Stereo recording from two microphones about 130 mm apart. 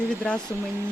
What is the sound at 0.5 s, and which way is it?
Speech, 15° right (ahead or behind).